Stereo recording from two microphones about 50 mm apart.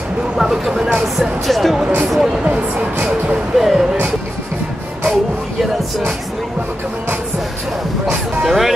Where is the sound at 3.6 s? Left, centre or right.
Centre.